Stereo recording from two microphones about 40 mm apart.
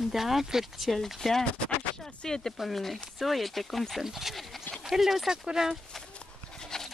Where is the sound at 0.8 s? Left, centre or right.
Centre.